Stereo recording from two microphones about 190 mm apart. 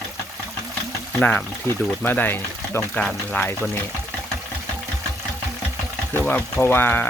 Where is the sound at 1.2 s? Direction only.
5° left (ahead or behind).